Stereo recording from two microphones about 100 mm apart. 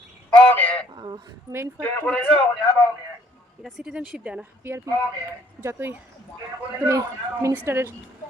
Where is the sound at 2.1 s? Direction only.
10° left (ahead or behind).